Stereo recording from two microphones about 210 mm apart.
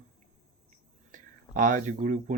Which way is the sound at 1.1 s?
40° right (ahead or behind).